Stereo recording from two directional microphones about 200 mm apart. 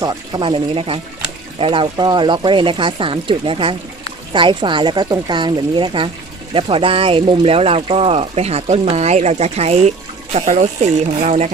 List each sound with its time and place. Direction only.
0.0 s speech: 20° right (ahead or behind)